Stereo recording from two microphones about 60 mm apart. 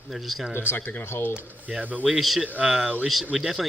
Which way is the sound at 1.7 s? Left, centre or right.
Right.